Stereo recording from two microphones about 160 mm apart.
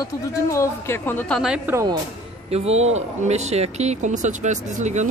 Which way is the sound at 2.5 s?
40° right (ahead or behind).